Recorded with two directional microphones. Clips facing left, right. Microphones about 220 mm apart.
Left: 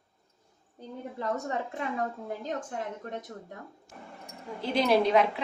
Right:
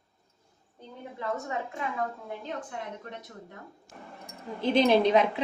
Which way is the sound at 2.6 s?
45° left (ahead or behind).